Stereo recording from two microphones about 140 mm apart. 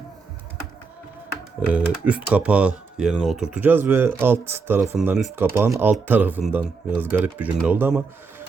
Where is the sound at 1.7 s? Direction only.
10° right (ahead or behind).